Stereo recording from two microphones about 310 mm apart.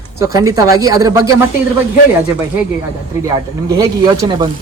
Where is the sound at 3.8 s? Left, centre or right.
Centre.